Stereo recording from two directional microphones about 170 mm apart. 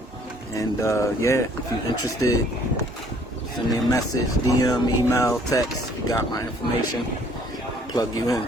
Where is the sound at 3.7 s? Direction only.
20° left (ahead or behind).